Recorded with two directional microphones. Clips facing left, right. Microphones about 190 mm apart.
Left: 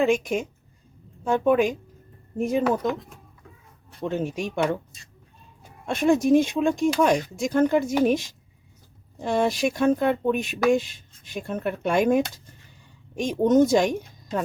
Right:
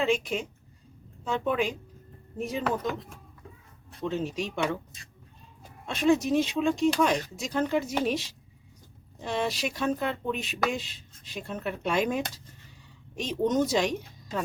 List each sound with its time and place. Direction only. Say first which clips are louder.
0.0 s speech: left 5 dB; 50° left (ahead or behind)
4.0 s speech: left 3 dB; 55° left (ahead or behind)
5.8 s speech: left 3 dB; 50° left (ahead or behind)